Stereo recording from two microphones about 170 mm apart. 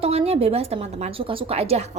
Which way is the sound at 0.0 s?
35° right (ahead or behind).